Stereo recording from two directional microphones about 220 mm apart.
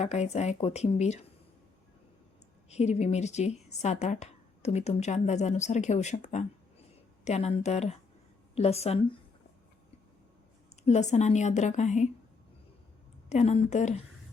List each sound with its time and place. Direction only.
0.0 s speech: 30° left (ahead or behind)
2.6 s a woman's voice: 30° left (ahead or behind)
10.8 s speech: 30° left (ahead or behind)
13.3 s speech: 30° left (ahead or behind)